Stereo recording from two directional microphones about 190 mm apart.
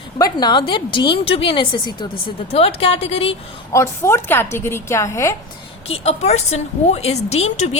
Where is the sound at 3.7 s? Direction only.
15° left (ahead or behind).